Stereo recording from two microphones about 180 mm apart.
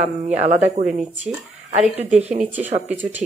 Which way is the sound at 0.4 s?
40° right (ahead or behind).